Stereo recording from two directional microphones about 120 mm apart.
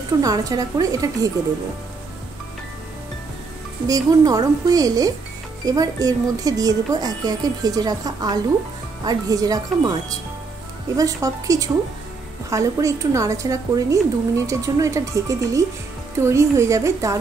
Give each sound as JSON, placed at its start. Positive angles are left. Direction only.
{"t": 0.2, "sound": "a woman's voice", "side_deg": -30}
{"t": 3.8, "sound": "a woman's voice", "side_deg": -30}
{"t": 11.0, "sound": "a woman's voice", "side_deg": -30}